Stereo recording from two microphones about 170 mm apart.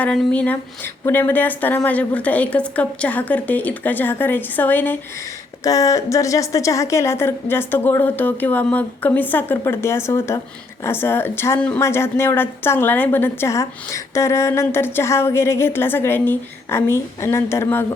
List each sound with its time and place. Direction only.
0.0 s speech: 5° left (ahead or behind)